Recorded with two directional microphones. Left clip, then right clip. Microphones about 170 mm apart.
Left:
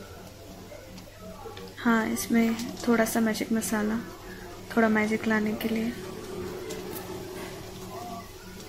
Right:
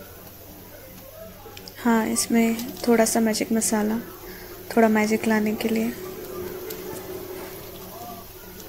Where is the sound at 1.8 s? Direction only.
15° right (ahead or behind).